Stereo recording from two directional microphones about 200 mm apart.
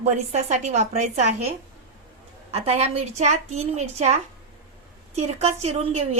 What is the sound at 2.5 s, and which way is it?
A woman's voice, 30° right (ahead or behind).